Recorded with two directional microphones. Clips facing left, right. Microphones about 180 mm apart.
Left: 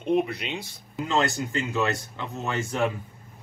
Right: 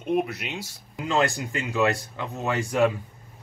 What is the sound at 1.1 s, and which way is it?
Speech, 15° right (ahead or behind).